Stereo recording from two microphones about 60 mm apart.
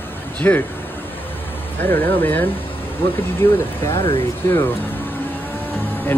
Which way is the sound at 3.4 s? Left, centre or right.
Left.